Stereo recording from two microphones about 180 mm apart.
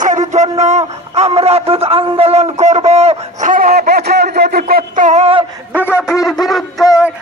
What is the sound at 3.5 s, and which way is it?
Speech, 50° right (ahead or behind).